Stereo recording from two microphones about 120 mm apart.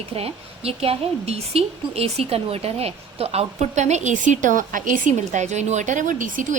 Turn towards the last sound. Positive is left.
turn(degrees=-90)